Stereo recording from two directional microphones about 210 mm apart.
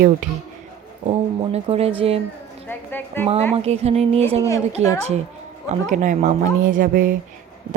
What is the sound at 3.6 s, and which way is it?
A woman's voice, 30° right (ahead or behind).